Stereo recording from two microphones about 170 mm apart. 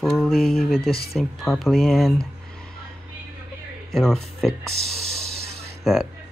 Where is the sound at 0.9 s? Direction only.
65° left (ahead or behind).